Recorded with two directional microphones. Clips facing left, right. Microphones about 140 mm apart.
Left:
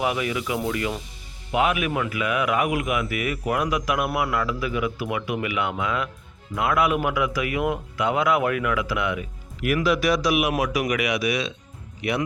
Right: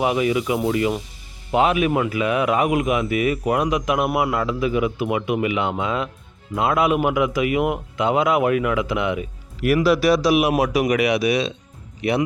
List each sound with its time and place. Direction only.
0.0 s speech: 25° right (ahead or behind)
9.6 s speech: 35° right (ahead or behind)